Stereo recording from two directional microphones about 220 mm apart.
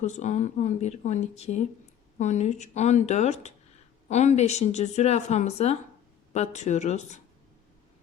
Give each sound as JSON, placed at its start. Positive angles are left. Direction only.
{"t": 0.0, "sound": "speech", "side_deg": 35}